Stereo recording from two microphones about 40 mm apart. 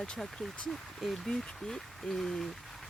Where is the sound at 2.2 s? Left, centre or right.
Centre.